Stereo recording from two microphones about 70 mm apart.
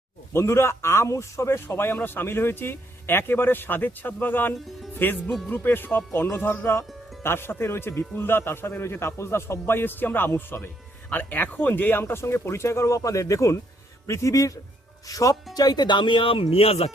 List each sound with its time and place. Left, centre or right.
0.3 s a man's voice: left
15.5 s speech: left